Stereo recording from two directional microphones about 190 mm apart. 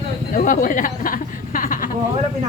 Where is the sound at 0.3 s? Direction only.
45° left (ahead or behind).